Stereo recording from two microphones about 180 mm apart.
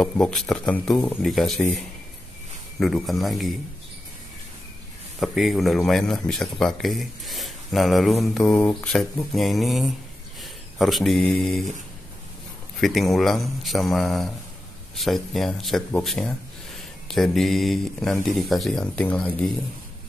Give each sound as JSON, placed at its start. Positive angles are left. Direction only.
{"t": 0.0, "sound": "speech", "side_deg": 0}
{"t": 5.2, "sound": "speech", "side_deg": 0}
{"t": 12.8, "sound": "speech", "side_deg": 0}